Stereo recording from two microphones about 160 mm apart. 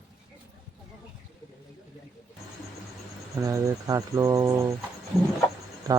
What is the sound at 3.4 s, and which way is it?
Speech, 20° right (ahead or behind).